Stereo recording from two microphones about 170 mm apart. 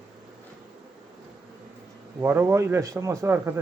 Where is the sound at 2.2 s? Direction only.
15° right (ahead or behind).